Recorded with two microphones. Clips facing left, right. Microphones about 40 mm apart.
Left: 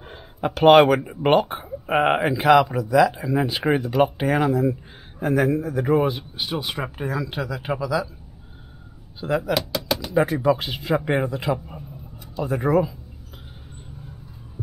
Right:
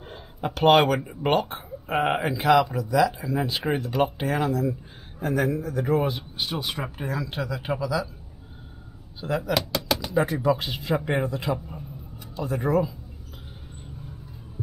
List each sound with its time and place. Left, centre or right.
0.0 s a sound: centre
1.0 s speech: centre
9.2 s speech: centre